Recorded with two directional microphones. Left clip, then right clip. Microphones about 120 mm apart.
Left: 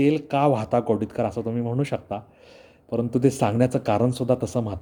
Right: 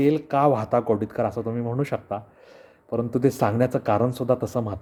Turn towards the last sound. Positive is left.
turn(degrees=15)  # may be behind; listen again after turning